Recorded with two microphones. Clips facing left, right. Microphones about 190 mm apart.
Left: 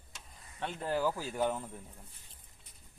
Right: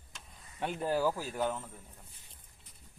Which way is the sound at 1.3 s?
5° left (ahead or behind).